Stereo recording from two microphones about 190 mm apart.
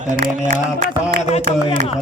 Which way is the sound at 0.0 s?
45° right (ahead or behind).